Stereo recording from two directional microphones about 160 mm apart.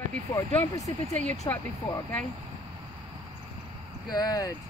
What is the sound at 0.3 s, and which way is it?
Speech, 20° left (ahead or behind).